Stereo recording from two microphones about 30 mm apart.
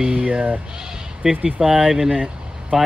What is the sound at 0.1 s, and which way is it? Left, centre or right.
Speech, right.